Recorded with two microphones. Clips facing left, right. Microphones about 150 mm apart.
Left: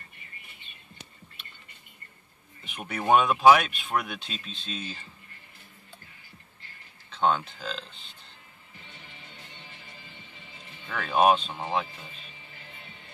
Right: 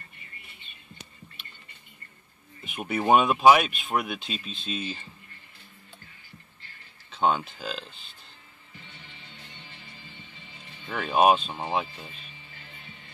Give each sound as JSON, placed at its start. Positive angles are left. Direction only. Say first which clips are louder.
{"t": 2.6, "sound": "speech", "louder": "right 4 dB", "side_deg": -5}
{"t": 7.1, "sound": "speech", "louder": "even", "side_deg": -10}
{"t": 10.9, "sound": "speech", "louder": "right 2 dB", "side_deg": -20}
{"t": 11.1, "sound": "speech", "louder": "right 1 dB", "side_deg": -5}